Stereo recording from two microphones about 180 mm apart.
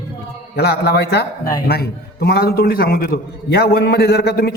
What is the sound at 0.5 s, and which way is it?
Speech, 65° left (ahead or behind).